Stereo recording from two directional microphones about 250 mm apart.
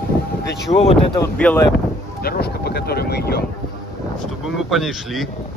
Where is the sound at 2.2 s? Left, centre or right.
Left.